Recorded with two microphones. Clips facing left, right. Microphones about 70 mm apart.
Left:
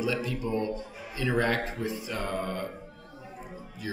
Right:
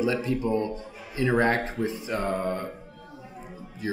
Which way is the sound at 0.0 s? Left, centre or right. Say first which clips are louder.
Right 5 dB; right.